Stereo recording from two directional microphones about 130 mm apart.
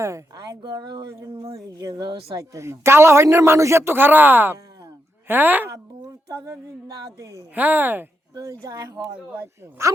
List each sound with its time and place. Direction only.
0.0 s a man's voice: 25° right (ahead or behind)
6.2 s a man's voice: 25° right (ahead or behind)
8.6 s a man's voice: 25° right (ahead or behind)